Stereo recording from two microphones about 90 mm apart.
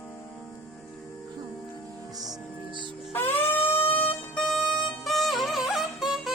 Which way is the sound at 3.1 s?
25° left (ahead or behind).